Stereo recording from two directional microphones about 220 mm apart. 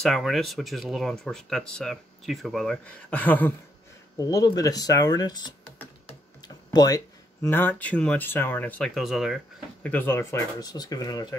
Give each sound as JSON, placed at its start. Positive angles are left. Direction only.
{"t": 0.0, "sound": "speech", "side_deg": 0}
{"t": 6.0, "sound": "typing", "side_deg": 20}
{"t": 7.4, "sound": "speech", "side_deg": 10}
{"t": 9.8, "sound": "speech", "side_deg": 10}